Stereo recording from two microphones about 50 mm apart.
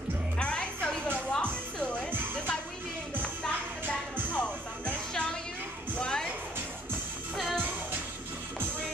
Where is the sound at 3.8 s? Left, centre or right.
Right.